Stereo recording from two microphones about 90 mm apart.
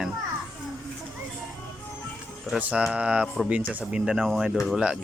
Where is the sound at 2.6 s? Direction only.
15° right (ahead or behind).